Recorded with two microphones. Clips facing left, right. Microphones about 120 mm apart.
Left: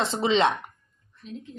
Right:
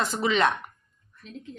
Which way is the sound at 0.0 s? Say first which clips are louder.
Left 2 dB; 25° left (ahead or behind).